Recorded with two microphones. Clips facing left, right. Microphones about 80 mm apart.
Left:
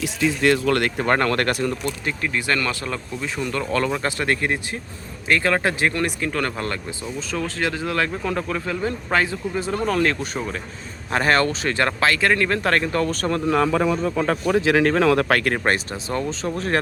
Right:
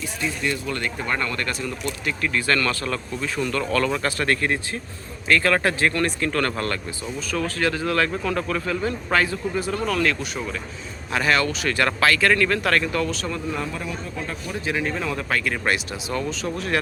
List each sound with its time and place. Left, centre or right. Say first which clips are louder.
0.0 s speech: left 7 dB; left
2.2 s speech: right 1 dB; centre; by 13.4 s left
13.5 s speech: left 10 dB; left